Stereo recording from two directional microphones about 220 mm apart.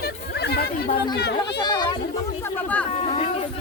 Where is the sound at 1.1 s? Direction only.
50° left (ahead or behind).